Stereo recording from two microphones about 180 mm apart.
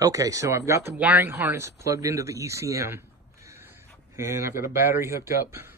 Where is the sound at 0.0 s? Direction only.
20° right (ahead or behind).